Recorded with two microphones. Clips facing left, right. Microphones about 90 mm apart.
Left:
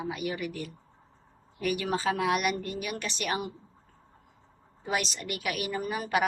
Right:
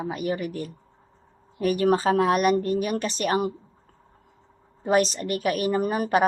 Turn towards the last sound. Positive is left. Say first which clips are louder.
# right 7 dB
turn(degrees=-40)  # may be behind; listen again after turning